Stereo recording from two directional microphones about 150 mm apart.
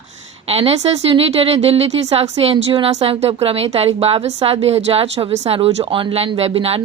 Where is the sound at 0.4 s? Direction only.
40° right (ahead or behind).